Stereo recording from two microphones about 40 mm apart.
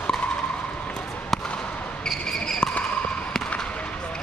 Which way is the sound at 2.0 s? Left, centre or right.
Centre.